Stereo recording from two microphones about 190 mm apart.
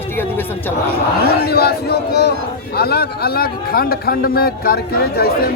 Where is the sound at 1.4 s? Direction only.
55° left (ahead or behind).